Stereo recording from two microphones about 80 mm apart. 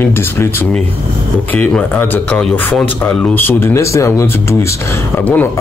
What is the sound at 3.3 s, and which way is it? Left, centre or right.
Speech, left.